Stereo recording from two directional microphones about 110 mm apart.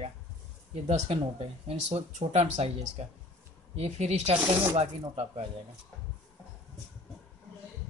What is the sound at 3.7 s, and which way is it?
Speech, 75° right (ahead or behind).